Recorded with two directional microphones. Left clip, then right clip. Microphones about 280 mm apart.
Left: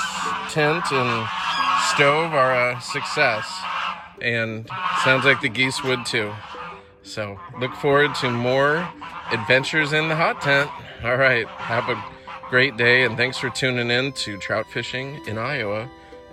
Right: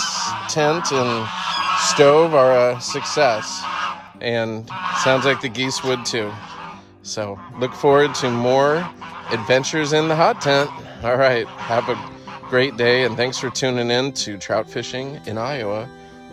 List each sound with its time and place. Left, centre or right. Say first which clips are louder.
0.0 s goose: right 2 dB; centre; by 2.0 s right
2.0 s speech: right 8 dB; centre
8.1 s speech: right 3 dB; right
8.5 s speech: right 2 dB; centre